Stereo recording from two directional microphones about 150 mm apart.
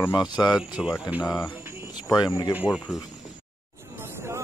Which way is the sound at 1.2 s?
20° left (ahead or behind).